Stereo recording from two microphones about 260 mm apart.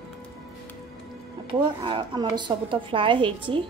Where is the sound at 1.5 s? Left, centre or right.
Centre.